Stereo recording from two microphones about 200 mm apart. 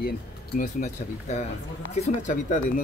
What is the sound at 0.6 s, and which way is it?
Speech, 35° left (ahead or behind).